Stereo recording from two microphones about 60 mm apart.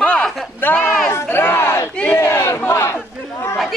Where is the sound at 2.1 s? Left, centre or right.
Left.